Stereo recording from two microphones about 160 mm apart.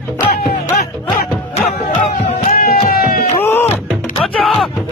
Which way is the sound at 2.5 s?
70° left (ahead or behind).